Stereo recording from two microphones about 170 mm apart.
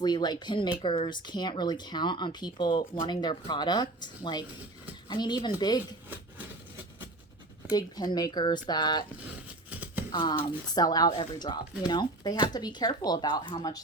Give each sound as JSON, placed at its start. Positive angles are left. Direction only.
{"t": 0.0, "sound": "speech", "side_deg": 25}
{"t": 7.7, "sound": "speech", "side_deg": 25}
{"t": 10.1, "sound": "speech", "side_deg": 25}